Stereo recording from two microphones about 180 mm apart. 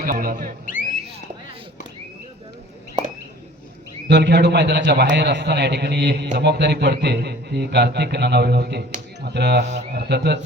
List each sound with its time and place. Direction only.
0.0 s speech: 55° right (ahead or behind)
0.6 s a sound: 50° left (ahead or behind)
4.1 s a man's voice: 70° right (ahead or behind)